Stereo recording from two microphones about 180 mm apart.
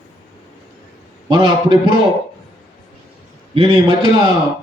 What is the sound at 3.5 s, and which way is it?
Speech, 30° right (ahead or behind).